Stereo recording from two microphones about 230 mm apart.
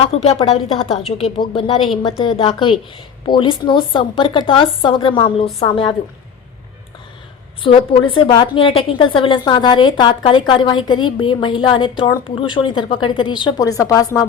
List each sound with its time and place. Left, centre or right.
0.0 s a woman's voice: left
7.6 s a woman's voice: left